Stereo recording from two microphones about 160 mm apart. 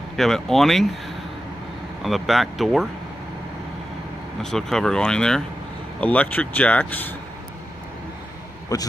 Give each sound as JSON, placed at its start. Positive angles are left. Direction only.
{"t": 0.1, "sound": "speech", "side_deg": 0}
{"t": 2.0, "sound": "speech", "side_deg": 0}
{"t": 4.4, "sound": "speech", "side_deg": 5}
{"t": 8.7, "sound": "a man's voice", "side_deg": 20}